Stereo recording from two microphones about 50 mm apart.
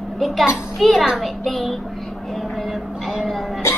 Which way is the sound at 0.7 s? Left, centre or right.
Centre.